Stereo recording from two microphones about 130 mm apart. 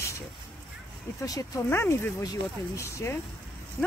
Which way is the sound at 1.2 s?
25° left (ahead or behind).